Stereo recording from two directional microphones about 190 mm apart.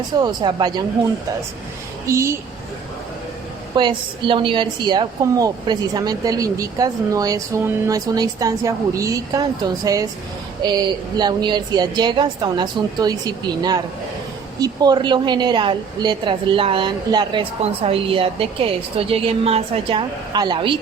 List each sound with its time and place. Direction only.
0.2 s a woman's voice: 20° right (ahead or behind)
2.0 s a woman's voice: 15° right (ahead or behind)
3.8 s a woman's voice: 25° right (ahead or behind)
11.2 s a woman's voice: 20° right (ahead or behind)